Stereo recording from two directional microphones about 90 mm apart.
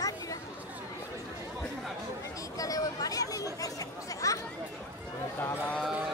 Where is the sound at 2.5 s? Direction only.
40° left (ahead or behind).